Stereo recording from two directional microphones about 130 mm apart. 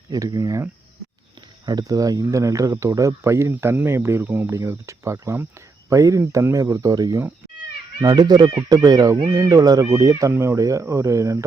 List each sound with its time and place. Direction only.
0.1 s speech: 25° right (ahead or behind)